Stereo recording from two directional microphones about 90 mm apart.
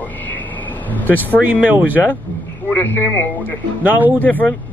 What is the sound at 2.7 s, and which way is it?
Speech, 20° left (ahead or behind).